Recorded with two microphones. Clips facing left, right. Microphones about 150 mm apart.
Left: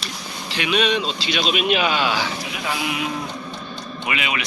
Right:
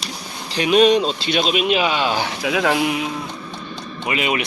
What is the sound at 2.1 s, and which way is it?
Speech, 50° right (ahead or behind).